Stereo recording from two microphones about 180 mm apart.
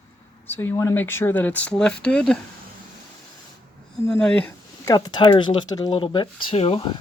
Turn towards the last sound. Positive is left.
turn(degrees=30)  # may be behind; listen again after turning